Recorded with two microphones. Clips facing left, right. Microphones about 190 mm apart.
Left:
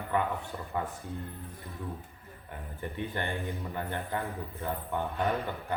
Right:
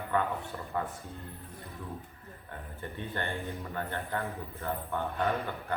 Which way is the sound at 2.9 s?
15° left (ahead or behind).